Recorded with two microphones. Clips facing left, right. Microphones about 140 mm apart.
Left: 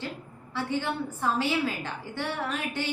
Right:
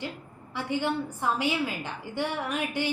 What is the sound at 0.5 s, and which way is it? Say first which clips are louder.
A woman's voice: right 1 dB; 15° right (ahead or behind).